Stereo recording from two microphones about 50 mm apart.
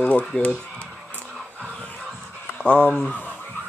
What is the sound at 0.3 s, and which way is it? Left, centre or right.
Speech, left.